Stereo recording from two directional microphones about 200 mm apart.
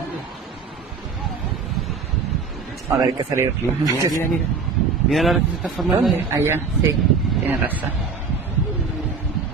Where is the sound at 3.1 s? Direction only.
15° right (ahead or behind).